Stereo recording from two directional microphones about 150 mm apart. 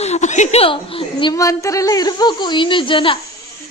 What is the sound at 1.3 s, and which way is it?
A woman's voice, 20° left (ahead or behind).